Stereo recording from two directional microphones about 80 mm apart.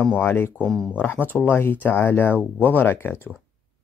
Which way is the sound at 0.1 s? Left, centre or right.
Left.